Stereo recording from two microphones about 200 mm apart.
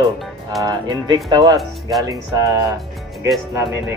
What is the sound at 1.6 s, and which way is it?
Speech, centre (ahead or behind).